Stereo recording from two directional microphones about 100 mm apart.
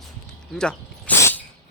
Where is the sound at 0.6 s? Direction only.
10° left (ahead or behind).